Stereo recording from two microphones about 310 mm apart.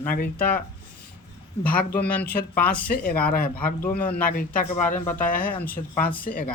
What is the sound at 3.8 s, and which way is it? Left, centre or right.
Speech, centre.